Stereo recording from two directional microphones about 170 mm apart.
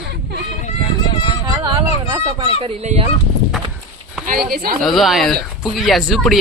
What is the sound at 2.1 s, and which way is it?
Speech, 30° right (ahead or behind).